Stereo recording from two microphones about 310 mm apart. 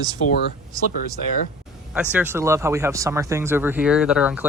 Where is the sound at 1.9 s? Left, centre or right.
Centre.